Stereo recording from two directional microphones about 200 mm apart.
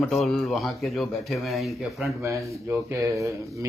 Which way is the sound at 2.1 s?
15° right (ahead or behind).